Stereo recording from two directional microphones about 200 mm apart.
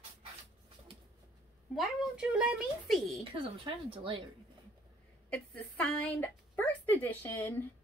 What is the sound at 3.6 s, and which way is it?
Speech, 25° right (ahead or behind).